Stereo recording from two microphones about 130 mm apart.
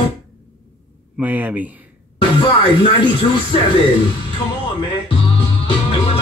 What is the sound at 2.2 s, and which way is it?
Speech, 40° left (ahead or behind).